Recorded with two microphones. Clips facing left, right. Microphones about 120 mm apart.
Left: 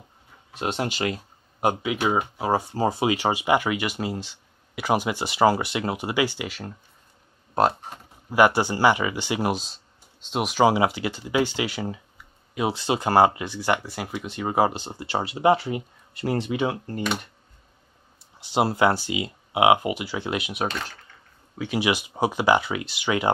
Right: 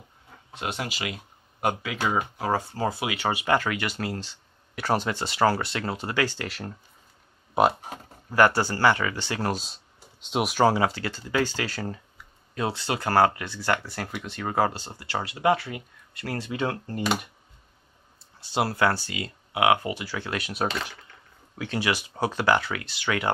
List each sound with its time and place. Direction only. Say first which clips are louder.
0.6 s speech: left 5 dB; 25° left (ahead or behind)
0.9 s speech: left 7 dB; 40° left (ahead or behind)
1.6 s speech: left 3 dB; 15° left (ahead or behind)
6.5 s speech: even; centre (ahead or behind)
8.3 s speech: left 2 dB; 15° left (ahead or behind)
10.3 s speech: even; centre (ahead or behind)
10.6 s speech: left 3 dB; 15° left (ahead or behind)
18.5 s speech: left 3 dB; 20° left (ahead or behind)
20.6 s speech: right 3 dB; 5° right (ahead or behind)
21.6 s speech: left 3 dB; 15° left (ahead or behind)